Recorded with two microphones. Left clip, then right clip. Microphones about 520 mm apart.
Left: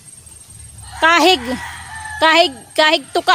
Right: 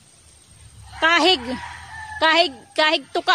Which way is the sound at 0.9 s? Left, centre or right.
Right.